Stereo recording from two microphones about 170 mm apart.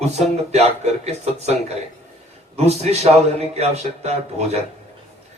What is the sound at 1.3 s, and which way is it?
Speech, 40° right (ahead or behind).